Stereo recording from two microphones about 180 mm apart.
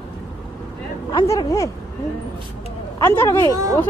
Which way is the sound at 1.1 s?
25° left (ahead or behind).